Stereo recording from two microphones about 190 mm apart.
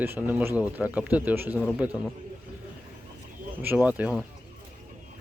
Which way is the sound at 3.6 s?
10° right (ahead or behind).